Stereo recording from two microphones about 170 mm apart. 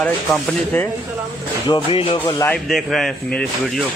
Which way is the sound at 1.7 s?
30° left (ahead or behind).